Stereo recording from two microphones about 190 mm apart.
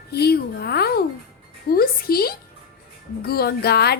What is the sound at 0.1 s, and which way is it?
A woman's voice, 55° left (ahead or behind).